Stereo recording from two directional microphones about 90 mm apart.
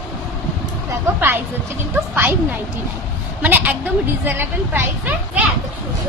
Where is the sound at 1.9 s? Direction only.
20° right (ahead or behind).